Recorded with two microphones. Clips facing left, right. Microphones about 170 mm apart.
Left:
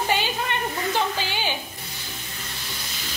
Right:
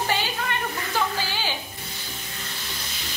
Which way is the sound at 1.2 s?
20° left (ahead or behind).